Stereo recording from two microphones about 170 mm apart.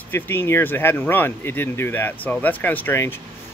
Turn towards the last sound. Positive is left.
turn(degrees=15)  # may be behind; listen again after turning